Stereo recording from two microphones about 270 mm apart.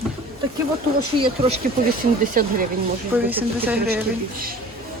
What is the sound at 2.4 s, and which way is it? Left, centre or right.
Speech, right.